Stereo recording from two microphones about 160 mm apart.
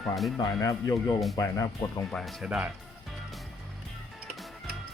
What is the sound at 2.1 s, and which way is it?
Speech, centre (ahead or behind).